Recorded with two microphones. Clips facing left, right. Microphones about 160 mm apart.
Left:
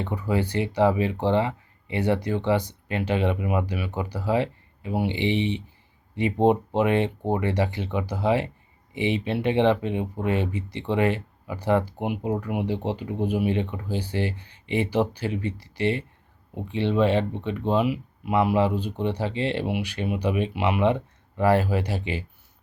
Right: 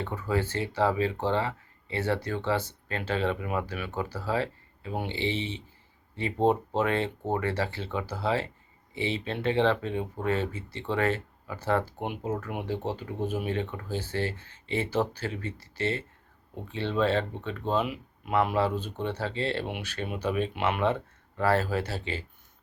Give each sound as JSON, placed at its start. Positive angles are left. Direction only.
{"t": 0.0, "sound": "speech", "side_deg": 15}